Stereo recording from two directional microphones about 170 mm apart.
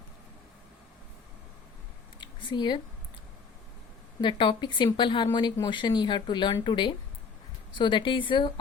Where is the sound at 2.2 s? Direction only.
30° left (ahead or behind).